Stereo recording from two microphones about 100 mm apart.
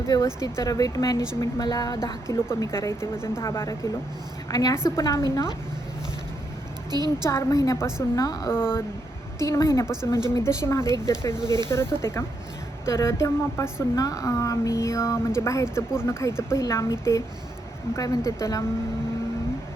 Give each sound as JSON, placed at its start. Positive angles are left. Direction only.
{"t": 0.1, "sound": "speech", "side_deg": 35}
{"t": 2.3, "sound": "a woman's voice", "side_deg": 30}
{"t": 6.9, "sound": "a woman's voice", "side_deg": -45}
{"t": 7.3, "sound": "a woman's voice", "side_deg": 30}
{"t": 8.4, "sound": "a woman's voice", "side_deg": 25}
{"t": 9.8, "sound": "speech", "side_deg": -5}
{"t": 10.3, "sound": "a woman's voice", "side_deg": 30}
{"t": 11.4, "sound": "a woman's voice", "side_deg": -45}
{"t": 11.7, "sound": "a woman's voice", "side_deg": 25}